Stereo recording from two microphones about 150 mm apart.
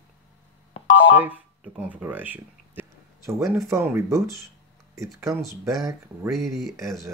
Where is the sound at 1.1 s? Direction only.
10° right (ahead or behind).